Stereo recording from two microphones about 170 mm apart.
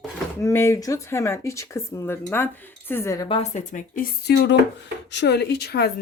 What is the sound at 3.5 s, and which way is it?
Speech, 50° left (ahead or behind).